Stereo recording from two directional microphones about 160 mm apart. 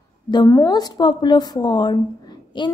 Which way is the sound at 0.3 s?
25° left (ahead or behind).